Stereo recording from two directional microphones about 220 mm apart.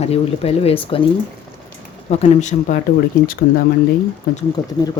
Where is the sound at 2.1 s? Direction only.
30° left (ahead or behind).